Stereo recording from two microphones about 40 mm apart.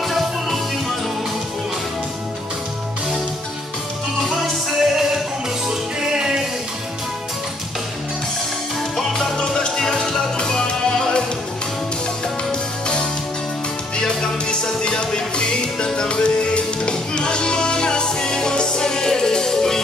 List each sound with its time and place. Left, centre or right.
0.0 s music: centre
4.4 s music: centre
8.9 s music: centre
12.4 s music: left